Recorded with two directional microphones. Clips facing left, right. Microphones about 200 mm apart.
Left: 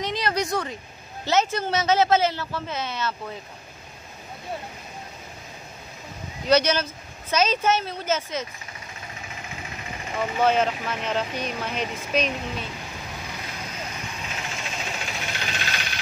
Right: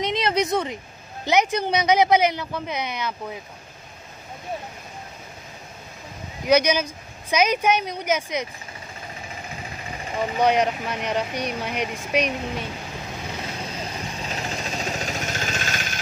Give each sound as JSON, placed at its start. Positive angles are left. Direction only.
{"t": 0.0, "sound": "speech", "side_deg": -20}
{"t": 6.4, "sound": "speech", "side_deg": -10}
{"t": 10.1, "sound": "speech", "side_deg": -15}
{"t": 13.9, "sound": "vehicle", "side_deg": -35}